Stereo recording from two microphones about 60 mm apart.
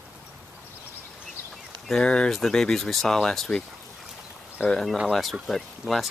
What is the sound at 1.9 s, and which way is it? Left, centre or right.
Speech, centre.